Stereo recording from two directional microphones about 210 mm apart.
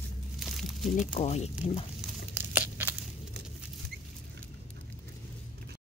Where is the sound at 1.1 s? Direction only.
30° left (ahead or behind).